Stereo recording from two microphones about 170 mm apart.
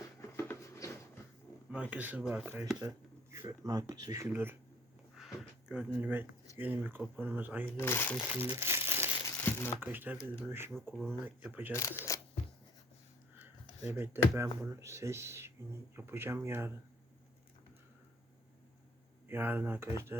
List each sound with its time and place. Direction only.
0.0 s writing: 15° left (ahead or behind)
1.7 s speech: 10° right (ahead or behind)
3.3 s speech: 20° right (ahead or behind)
5.1 s speech: centre (ahead or behind)
7.8 s speech: 15° left (ahead or behind)
8.4 s crumpling: 15° right (ahead or behind)
9.2 s a sound: 15° left (ahead or behind)
9.8 s speech: 10° right (ahead or behind)
11.8 s speech: 20° left (ahead or behind)
13.4 s dishes: 10° right (ahead or behind)
14.6 s speech: 15° right (ahead or behind)
19.3 s speech: 10° right (ahead or behind)